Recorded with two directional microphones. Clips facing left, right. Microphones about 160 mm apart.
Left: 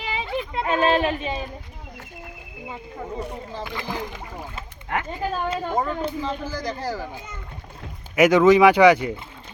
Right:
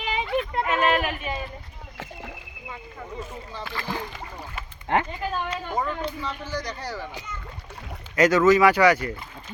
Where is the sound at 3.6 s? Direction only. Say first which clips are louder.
Even; 15° left (ahead or behind).